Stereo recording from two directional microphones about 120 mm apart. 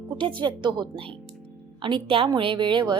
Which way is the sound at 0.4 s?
40° right (ahead or behind).